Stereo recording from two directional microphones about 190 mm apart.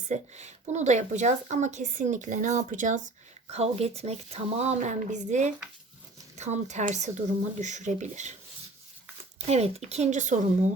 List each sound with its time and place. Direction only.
0.1 s speech: 35° right (ahead or behind)
9.5 s speech: 35° right (ahead or behind)